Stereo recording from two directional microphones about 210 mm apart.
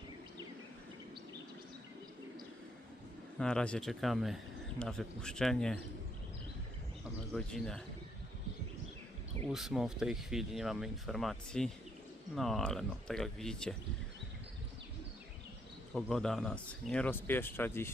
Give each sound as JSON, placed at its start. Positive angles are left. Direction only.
{"t": 3.3, "sound": "speech", "side_deg": 5}
{"t": 7.3, "sound": "speech", "side_deg": 5}
{"t": 9.5, "sound": "speech", "side_deg": 0}
{"t": 16.0, "sound": "speech", "side_deg": 0}